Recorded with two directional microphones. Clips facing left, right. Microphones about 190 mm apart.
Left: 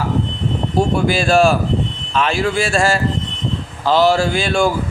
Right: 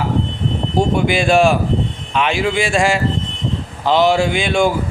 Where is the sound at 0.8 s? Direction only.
20° right (ahead or behind).